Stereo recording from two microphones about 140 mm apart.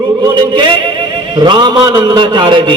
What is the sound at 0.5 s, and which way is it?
A man's voice, 35° right (ahead or behind).